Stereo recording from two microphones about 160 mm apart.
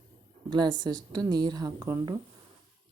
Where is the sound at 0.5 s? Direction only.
25° right (ahead or behind).